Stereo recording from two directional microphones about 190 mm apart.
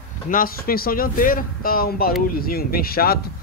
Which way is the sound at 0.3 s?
50° left (ahead or behind).